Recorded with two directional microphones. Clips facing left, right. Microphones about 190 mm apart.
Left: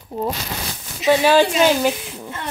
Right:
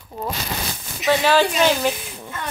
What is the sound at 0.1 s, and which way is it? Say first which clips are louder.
Speech: left 6 dB; 25° left (ahead or behind).